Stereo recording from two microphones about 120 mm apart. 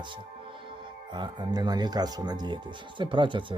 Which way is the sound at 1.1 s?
40° right (ahead or behind).